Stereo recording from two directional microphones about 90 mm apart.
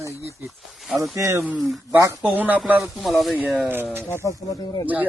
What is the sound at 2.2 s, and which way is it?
Speech, 20° right (ahead or behind).